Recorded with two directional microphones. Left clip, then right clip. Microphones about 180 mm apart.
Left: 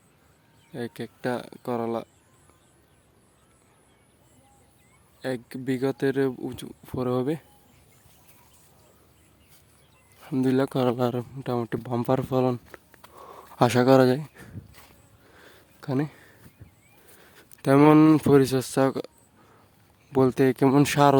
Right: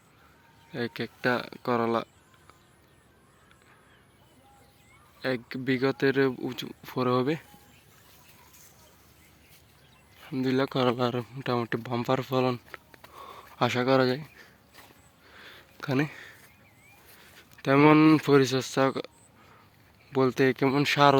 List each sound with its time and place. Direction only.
0.7 s speech: 15° left (ahead or behind)
5.2 s speech: 20° left (ahead or behind)
10.2 s speech: 35° left (ahead or behind)
13.1 s a sound: 30° left (ahead or behind)
13.6 s speech: 40° left (ahead or behind)
15.4 s a sound: 25° left (ahead or behind)
17.2 s speech: 40° left (ahead or behind)
20.1 s speech: 35° left (ahead or behind)